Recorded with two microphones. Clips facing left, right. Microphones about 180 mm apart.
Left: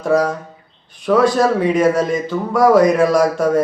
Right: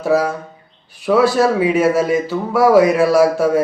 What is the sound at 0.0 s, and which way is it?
A man's voice, 5° right (ahead or behind).